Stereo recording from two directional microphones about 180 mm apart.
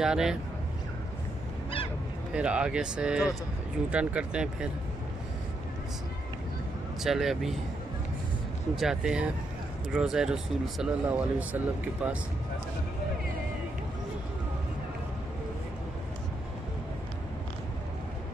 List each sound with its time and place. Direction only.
0.0 s speech: 5° right (ahead or behind)
2.3 s speech: 5° right (ahead or behind)
7.0 s speech: centre (ahead or behind)
8.7 s speech: 5° right (ahead or behind)